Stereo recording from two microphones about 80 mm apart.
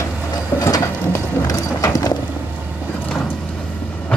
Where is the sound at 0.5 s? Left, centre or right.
Left.